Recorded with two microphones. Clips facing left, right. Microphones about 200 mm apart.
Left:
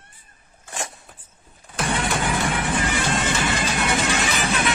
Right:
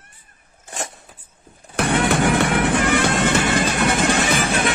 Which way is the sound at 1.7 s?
65° right (ahead or behind).